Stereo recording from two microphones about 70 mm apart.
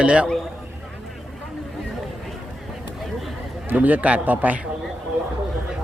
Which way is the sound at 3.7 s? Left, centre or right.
Right.